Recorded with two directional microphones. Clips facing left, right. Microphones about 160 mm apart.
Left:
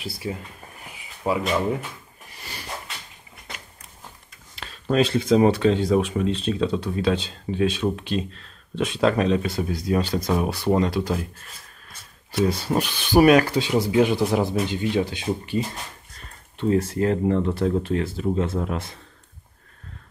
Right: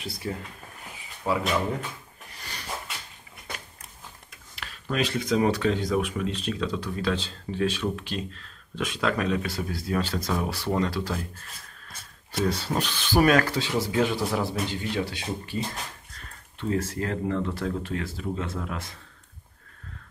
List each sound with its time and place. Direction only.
0.2 s speech: 15° left (ahead or behind)
4.6 s speech: 30° left (ahead or behind)
12.3 s speech: 15° left (ahead or behind)